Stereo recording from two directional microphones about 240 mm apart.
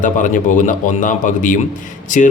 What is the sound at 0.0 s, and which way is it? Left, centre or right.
Speech, left.